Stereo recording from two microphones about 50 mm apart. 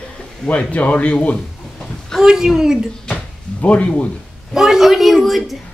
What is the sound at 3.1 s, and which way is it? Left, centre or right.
Speech, left.